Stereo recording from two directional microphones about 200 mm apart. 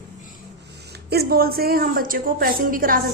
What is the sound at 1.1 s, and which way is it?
A woman's voice, 50° right (ahead or behind).